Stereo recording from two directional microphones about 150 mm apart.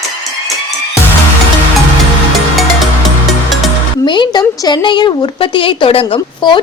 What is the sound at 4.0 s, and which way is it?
Speech, 30° left (ahead or behind).